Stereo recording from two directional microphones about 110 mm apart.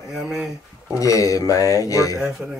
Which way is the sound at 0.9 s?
30° left (ahead or behind).